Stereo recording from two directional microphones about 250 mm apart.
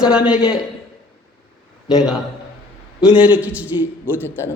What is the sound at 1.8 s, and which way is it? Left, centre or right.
A man's voice, centre.